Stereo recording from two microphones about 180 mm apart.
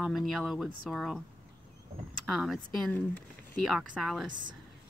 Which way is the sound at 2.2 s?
Centre (ahead or behind).